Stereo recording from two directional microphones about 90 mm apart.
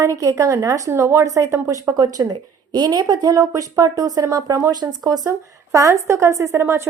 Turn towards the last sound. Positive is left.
turn(degrees=-30)  # may be behind; listen again after turning